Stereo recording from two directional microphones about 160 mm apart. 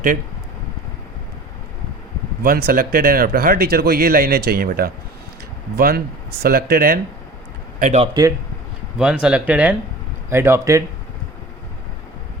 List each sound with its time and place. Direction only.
2.4 s speech: 70° right (ahead or behind)
7.8 s a man's voice: 50° right (ahead or behind)
8.0 s speech: 25° right (ahead or behind)
9.0 s speech: 5° right (ahead or behind)